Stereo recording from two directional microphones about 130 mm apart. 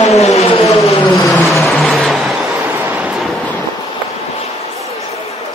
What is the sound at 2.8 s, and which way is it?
Train, 10° right (ahead or behind).